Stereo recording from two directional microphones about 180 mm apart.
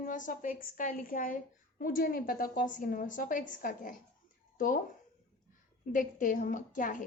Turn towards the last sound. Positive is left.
turn(degrees=45)  # may be behind; listen again after turning